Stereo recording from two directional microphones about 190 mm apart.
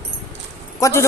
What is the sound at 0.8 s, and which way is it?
Speech, 15° left (ahead or behind).